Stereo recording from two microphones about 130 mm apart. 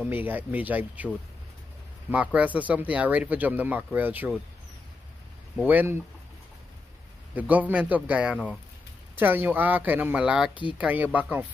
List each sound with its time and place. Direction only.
0.0 s speech: 15° right (ahead or behind)
5.6 s speech: 15° right (ahead or behind)
7.3 s speech: 10° right (ahead or behind)
10.5 s speech: 40° left (ahead or behind)
10.8 s speech: 10° right (ahead or behind)